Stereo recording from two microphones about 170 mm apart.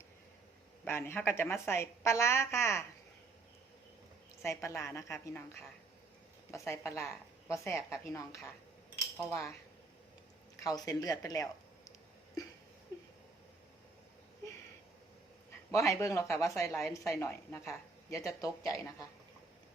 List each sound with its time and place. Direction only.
0.9 s a woman's voice: 15° left (ahead or behind)
4.4 s a woman's voice: 15° left (ahead or behind)
6.5 s a woman's voice: 15° left (ahead or behind)
10.6 s a woman's voice: 20° left (ahead or behind)
11.9 s a sound: 20° left (ahead or behind)
15.7 s a woman's voice: 20° left (ahead or behind)